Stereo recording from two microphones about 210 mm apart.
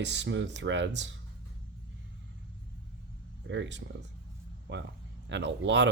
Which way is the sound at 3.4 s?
60° right (ahead or behind).